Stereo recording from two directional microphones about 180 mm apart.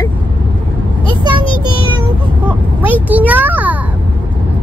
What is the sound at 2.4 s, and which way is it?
A child's voice, 10° right (ahead or behind).